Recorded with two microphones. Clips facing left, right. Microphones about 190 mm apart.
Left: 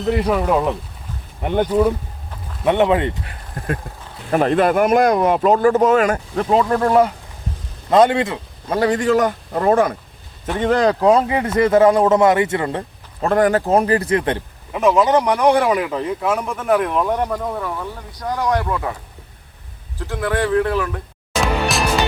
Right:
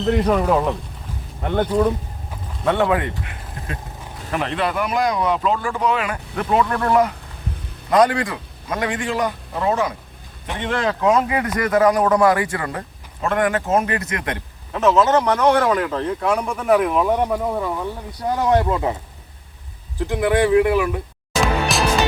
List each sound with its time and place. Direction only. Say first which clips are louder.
0.0 s speech: even; 5° left (ahead or behind)
1.4 s speech: left 2 dB; 15° left (ahead or behind)
4.3 s a man's voice: left 7 dB; 40° left (ahead or behind)
10.4 s speech: left 6 dB; 40° left (ahead or behind); by 12.8 s 25° left (ahead or behind)
13.2 s a man's voice: left 4 dB; 35° left (ahead or behind)
14.7 s speech: left 1 dB; 10° left (ahead or behind); by 18.9 s 20° right (ahead or behind)
20.0 s speech: right 3 dB; 15° right (ahead or behind)
21.4 s music: even; centre (ahead or behind)